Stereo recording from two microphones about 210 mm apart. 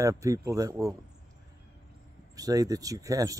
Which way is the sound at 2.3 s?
15° right (ahead or behind).